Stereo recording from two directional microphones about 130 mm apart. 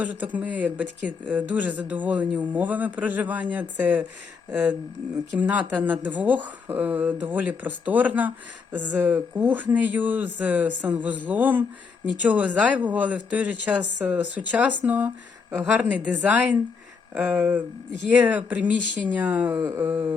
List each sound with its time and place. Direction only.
0.0 s speech: 10° right (ahead or behind)
5.4 s speech: 10° right (ahead or behind)
19.5 s a sound: 25° right (ahead or behind)